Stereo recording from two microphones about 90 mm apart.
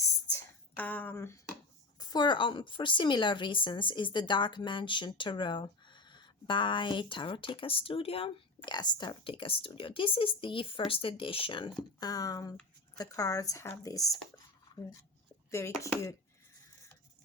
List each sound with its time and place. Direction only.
0.8 s speech: 20° left (ahead or behind)
2.0 s a woman's voice: 50° left (ahead or behind); by 8.7 s 90° left
8.7 s speech: 55° left (ahead or behind); by 9.7 s 85° left
9.7 s speech: 75° left (ahead or behind)
11.9 s speech: 45° left (ahead or behind)